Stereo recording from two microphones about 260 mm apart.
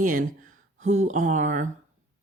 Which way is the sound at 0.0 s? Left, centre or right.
Right.